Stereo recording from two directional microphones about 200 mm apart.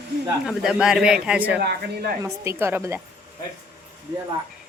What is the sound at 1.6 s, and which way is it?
Speech, 50° right (ahead or behind).